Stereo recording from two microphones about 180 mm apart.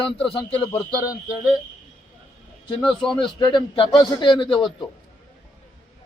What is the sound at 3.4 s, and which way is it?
A man's voice, 25° left (ahead or behind).